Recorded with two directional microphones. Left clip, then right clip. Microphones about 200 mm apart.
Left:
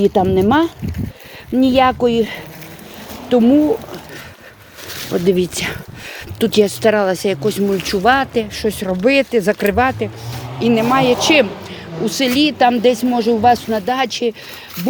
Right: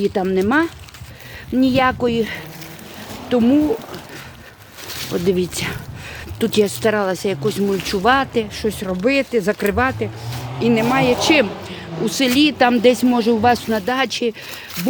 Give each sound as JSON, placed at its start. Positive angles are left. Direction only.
{"t": 0.0, "sound": "speech", "side_deg": 5}
{"t": 5.3, "sound": "speech", "side_deg": 5}
{"t": 8.6, "sound": "speech", "side_deg": 5}
{"t": 11.3, "sound": "a woman's voice", "side_deg": -10}